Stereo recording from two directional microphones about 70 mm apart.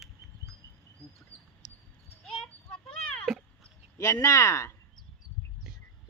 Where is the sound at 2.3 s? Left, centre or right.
Centre.